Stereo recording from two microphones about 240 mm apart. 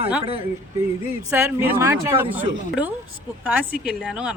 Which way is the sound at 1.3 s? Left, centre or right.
Centre.